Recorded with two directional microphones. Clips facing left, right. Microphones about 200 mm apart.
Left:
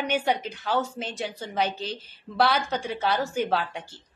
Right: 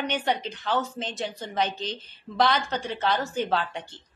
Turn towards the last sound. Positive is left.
turn(degrees=10)  # may be behind; listen again after turning